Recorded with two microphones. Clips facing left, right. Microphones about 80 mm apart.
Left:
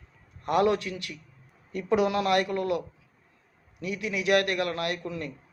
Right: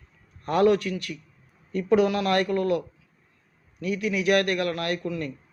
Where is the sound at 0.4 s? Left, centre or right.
Left.